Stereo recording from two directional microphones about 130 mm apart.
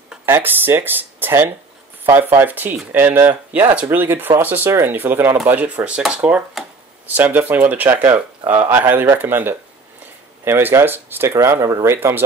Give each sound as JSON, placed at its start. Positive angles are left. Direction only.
{"t": 0.2, "sound": "speech", "side_deg": -15}